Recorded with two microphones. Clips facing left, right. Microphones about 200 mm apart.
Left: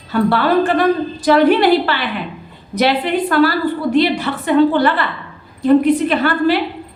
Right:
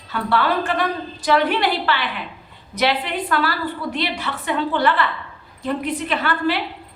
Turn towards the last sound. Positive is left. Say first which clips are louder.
# left 7 dB
turn(degrees=40)  # may be behind; listen again after turning